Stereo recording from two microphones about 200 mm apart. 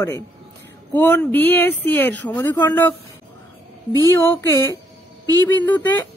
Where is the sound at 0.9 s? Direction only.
10° left (ahead or behind).